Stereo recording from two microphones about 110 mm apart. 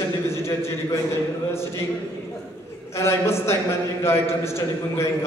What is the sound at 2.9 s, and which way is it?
A man's voice, 25° left (ahead or behind).